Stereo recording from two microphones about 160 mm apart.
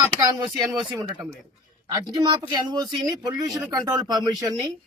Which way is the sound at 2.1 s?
25° right (ahead or behind).